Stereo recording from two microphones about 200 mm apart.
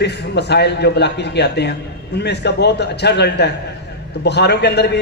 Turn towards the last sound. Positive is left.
turn(degrees=55)  # may be behind; listen again after turning